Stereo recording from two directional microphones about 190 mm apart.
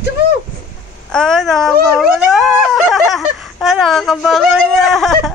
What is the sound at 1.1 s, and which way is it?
Speech, 5° left (ahead or behind).